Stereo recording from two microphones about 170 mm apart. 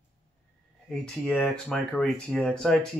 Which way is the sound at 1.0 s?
5° left (ahead or behind).